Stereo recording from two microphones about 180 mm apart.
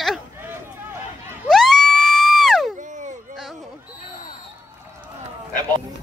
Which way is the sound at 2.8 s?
45° right (ahead or behind).